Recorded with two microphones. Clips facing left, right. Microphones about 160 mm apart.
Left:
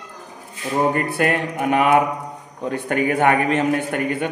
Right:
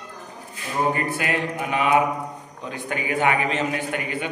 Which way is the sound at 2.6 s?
55° left (ahead or behind).